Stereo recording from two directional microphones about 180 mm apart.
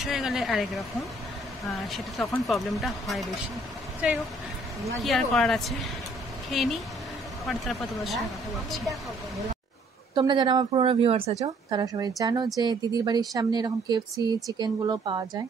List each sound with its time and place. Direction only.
0.0 s speech: centre (ahead or behind)
5.0 s speech: centre (ahead or behind)
10.1 s speech: 25° right (ahead or behind)
11.7 s speech: 20° right (ahead or behind)